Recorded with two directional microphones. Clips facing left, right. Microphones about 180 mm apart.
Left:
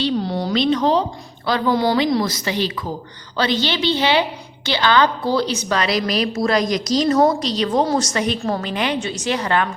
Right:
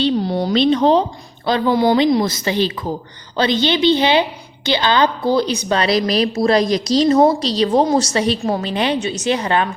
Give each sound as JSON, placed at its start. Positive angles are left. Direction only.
{"t": 0.0, "sound": "a woman's voice", "side_deg": -15}
{"t": 0.5, "sound": "a woman's voice", "side_deg": -25}
{"t": 5.7, "sound": "a woman's voice", "side_deg": -30}